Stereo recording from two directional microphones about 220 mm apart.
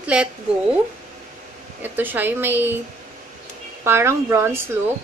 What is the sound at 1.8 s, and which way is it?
Speech, 10° right (ahead or behind).